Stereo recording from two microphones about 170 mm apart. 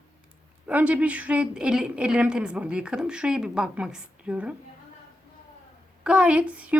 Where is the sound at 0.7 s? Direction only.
10° right (ahead or behind).